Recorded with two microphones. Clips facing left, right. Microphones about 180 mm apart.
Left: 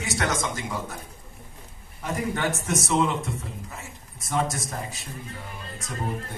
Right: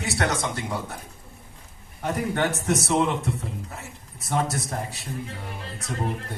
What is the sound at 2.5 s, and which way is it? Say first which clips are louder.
Speech: right 3 dB; 35° right (ahead or behind).